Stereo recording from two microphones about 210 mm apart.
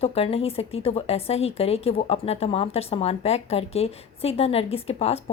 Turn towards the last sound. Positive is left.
turn(degrees=30)  # may be behind; listen again after turning